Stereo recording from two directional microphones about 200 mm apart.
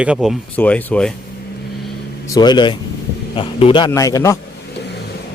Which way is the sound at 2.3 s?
20° left (ahead or behind).